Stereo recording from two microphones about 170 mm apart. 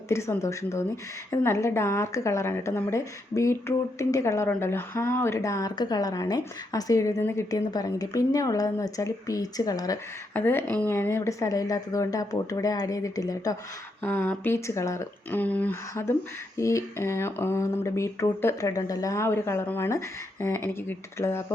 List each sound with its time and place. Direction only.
0.1 s a woman's voice: 15° left (ahead or behind)